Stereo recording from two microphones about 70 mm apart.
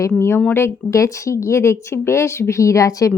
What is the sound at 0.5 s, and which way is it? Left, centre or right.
Speech, left.